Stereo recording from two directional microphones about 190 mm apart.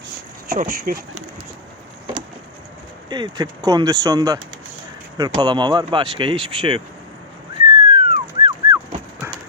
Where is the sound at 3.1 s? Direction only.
20° right (ahead or behind).